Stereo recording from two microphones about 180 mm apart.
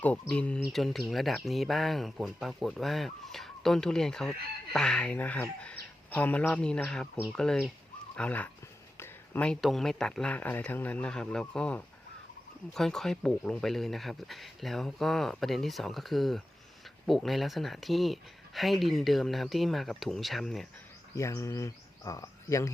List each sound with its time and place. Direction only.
0.0 s speech: 5° left (ahead or behind)
21.2 s speech: 15° left (ahead or behind)